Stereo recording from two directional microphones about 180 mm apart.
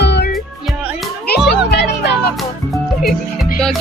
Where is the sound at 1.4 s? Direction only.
70° left (ahead or behind).